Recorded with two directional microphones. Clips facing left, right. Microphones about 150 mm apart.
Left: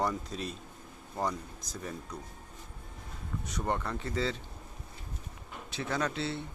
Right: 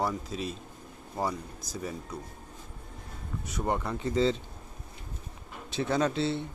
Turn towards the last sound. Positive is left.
turn(degrees=-25)  # may be behind; listen again after turning